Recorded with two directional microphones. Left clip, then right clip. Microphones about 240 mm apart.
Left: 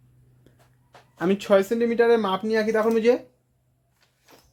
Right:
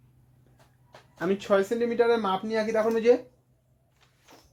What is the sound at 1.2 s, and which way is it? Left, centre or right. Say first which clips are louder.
Speech: left 4 dB; left.